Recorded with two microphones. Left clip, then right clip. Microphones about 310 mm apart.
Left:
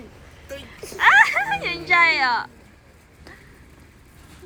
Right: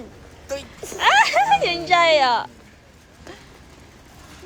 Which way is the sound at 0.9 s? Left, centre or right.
Centre.